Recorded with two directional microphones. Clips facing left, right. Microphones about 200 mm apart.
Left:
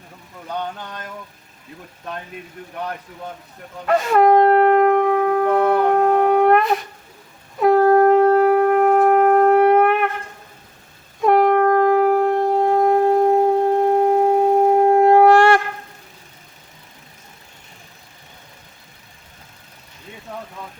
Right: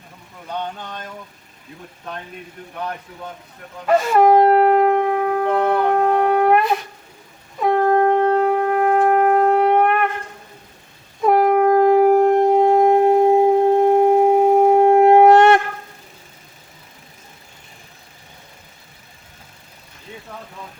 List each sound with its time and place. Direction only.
3.8 s shofar: centre (ahead or behind)
7.6 s shofar: 5° left (ahead or behind)
11.2 s shofar: centre (ahead or behind); by 15.6 s 20° right (ahead or behind)